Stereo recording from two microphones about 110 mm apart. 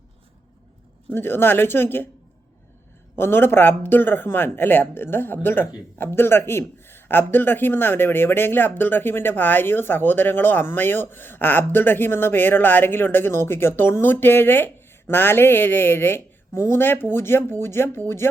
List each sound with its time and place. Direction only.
1.1 s a man's voice: 20° left (ahead or behind)
3.2 s a man's voice: 20° left (ahead or behind)